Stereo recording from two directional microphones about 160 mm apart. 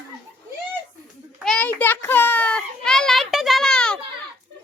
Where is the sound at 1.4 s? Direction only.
5° left (ahead or behind).